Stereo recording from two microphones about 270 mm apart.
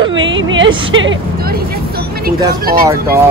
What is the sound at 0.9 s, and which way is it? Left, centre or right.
Vehicle, right.